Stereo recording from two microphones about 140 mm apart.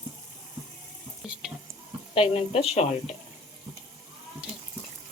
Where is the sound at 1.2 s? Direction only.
5° right (ahead or behind).